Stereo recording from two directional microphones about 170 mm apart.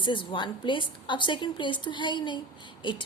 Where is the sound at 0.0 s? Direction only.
30° left (ahead or behind).